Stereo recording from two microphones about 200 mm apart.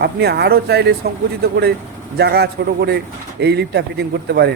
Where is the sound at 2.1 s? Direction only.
55° right (ahead or behind).